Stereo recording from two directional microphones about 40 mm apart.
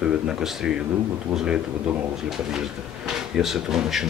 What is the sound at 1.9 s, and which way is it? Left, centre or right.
Speech, right.